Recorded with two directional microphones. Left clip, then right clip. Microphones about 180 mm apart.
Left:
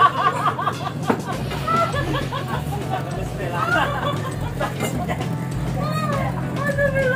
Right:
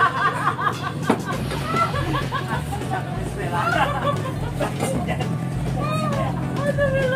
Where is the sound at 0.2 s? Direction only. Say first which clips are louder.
Left 1 dB; centre (ahead or behind).